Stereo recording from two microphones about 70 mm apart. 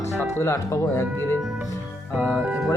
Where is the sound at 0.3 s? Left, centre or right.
Left.